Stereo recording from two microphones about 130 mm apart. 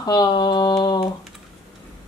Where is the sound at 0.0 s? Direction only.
30° left (ahead or behind).